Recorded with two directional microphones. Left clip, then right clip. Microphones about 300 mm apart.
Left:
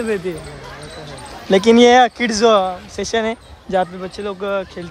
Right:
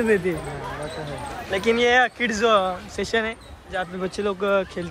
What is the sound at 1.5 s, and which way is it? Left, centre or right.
Speech, centre.